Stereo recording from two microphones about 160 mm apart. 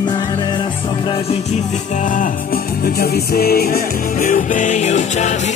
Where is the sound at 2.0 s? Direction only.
60° left (ahead or behind).